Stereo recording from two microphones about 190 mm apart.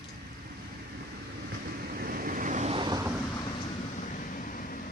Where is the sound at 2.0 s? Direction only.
50° right (ahead or behind); by 3.1 s 20° right (ahead or behind).